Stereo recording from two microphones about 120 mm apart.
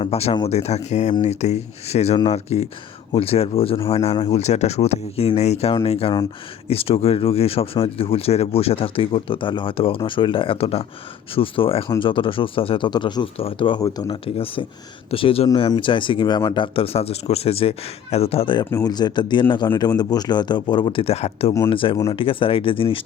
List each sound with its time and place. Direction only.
0.0 s a man's voice: 55° left (ahead or behind)
4.3 s a man's voice: 65° left (ahead or behind)
18.7 s speech: 30° left (ahead or behind)
21.0 s a man's voice: 60° left (ahead or behind)
21.7 s speech: 45° left (ahead or behind)